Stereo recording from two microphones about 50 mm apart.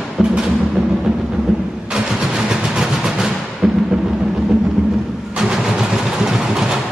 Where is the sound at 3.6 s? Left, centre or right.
Centre.